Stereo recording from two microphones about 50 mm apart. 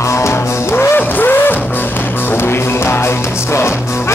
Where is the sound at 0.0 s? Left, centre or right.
Left.